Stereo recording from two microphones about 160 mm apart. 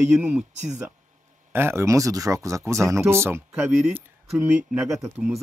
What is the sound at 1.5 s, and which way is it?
A man's voice, 15° right (ahead or behind).